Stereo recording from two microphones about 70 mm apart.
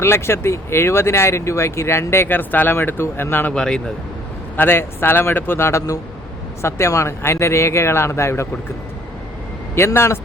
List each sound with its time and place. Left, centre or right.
0.0 s speech: left
3.5 s speech: centre
4.5 s speech: left
9.7 s speech: left